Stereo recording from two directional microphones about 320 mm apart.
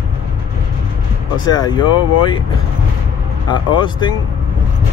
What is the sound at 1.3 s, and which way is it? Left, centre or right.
Speech, centre.